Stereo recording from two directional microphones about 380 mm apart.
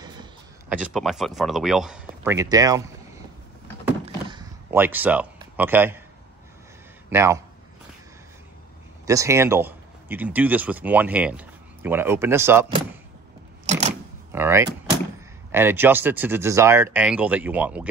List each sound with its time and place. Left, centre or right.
0.0 s speech: centre
3.8 s a sound: centre
7.1 s a man's voice: centre
9.0 s speech: centre
13.7 s a sound: centre
14.3 s speech: centre